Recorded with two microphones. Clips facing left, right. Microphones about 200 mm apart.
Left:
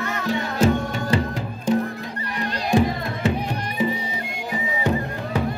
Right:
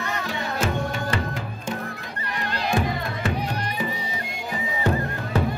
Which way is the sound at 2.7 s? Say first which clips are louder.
Left 5 dB; 25° left (ahead or behind).